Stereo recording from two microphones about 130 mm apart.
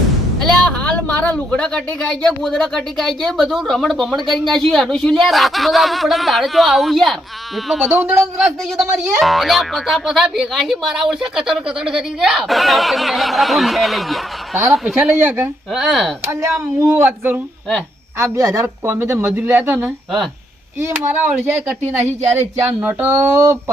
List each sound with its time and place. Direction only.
0.3 s a sound: 5° left (ahead or behind)
1.5 s speech: 10° left (ahead or behind)
7.9 s speech: 15° right (ahead or behind)
15.1 s speech: 15° right (ahead or behind); by 16.1 s centre (ahead or behind)
16.3 s speech: 25° right (ahead or behind)
16.9 s speech: 10° right (ahead or behind)
18.2 s speech: 25° right (ahead or behind)
21.1 s speech: 5° right (ahead or behind)
21.8 s speech: 20° right (ahead or behind)